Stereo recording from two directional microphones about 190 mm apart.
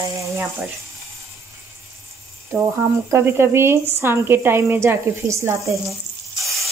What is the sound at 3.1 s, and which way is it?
A woman's voice, 10° right (ahead or behind).